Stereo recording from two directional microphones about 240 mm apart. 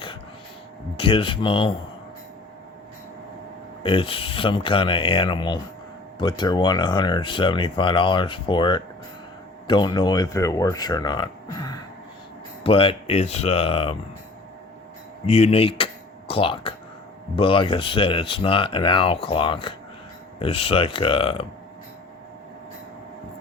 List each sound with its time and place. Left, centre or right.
0.9 s speech: left
3.8 s speech: left
15.3 s speech: left